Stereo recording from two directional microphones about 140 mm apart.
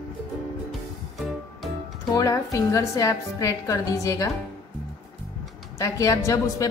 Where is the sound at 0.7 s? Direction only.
Centre (ahead or behind).